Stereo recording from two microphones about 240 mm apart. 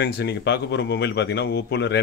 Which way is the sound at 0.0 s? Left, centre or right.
Left.